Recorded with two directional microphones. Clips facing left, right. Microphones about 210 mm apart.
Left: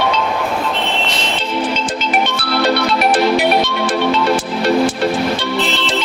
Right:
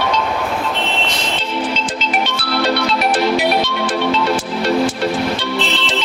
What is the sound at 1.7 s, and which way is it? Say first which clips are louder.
Music: left 2 dB; 50° left (ahead or behind).